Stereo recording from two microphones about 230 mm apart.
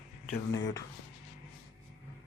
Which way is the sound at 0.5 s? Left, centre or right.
Centre.